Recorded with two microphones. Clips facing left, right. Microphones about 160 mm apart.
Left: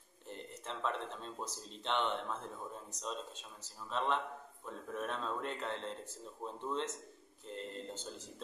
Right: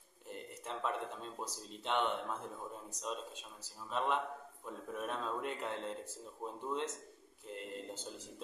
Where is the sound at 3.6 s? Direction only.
5° right (ahead or behind).